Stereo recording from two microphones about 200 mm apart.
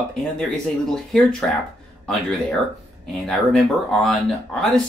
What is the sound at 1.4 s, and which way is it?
Speech, 5° left (ahead or behind).